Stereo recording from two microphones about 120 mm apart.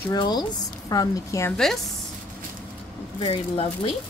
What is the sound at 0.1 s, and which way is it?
Speech, 35° left (ahead or behind).